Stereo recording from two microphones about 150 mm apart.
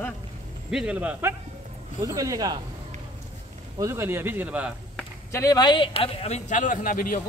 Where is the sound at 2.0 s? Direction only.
20° right (ahead or behind).